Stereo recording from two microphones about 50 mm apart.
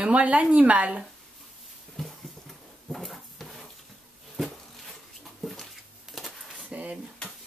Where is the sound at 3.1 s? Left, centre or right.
Centre.